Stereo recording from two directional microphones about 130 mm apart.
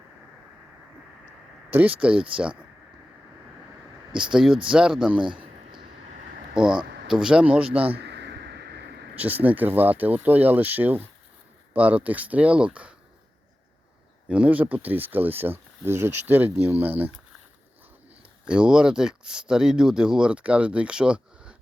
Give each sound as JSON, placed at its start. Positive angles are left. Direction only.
{"t": 1.7, "sound": "speech", "side_deg": -15}
{"t": 4.1, "sound": "speech", "side_deg": -5}
{"t": 5.2, "sound": "a man's voice", "side_deg": -40}
{"t": 6.5, "sound": "speech", "side_deg": -5}
{"t": 9.1, "sound": "speech", "side_deg": -10}
{"t": 14.3, "sound": "speech", "side_deg": -10}
{"t": 18.4, "sound": "speech", "side_deg": -5}